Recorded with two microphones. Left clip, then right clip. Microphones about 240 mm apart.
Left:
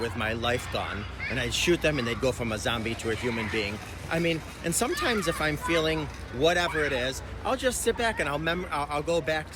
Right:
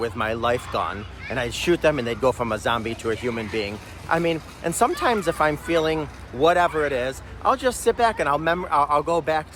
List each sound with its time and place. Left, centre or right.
0.0 s speech: centre